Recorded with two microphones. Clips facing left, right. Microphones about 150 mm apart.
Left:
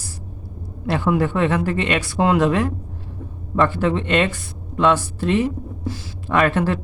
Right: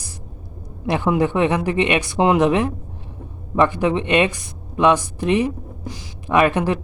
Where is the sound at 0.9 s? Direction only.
20° right (ahead or behind).